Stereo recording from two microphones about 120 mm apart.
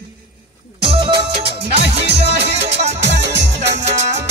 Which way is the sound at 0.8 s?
45° right (ahead or behind).